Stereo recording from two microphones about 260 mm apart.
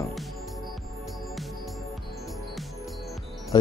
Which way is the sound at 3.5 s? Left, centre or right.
Centre.